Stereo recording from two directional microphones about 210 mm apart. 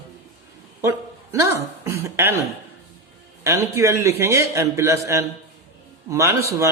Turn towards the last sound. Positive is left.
turn(degrees=-15)  # may be behind; listen again after turning